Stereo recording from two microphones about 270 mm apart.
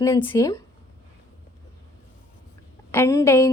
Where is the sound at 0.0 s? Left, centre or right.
Centre.